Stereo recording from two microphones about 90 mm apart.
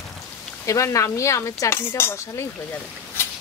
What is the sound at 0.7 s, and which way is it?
Speech, 35° left (ahead or behind).